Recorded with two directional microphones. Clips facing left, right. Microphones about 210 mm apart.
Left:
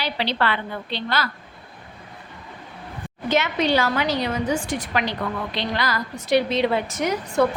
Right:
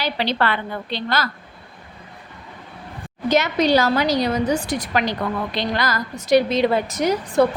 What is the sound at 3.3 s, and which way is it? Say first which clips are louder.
A woman's voice: right 3 dB; 40° right (ahead or behind).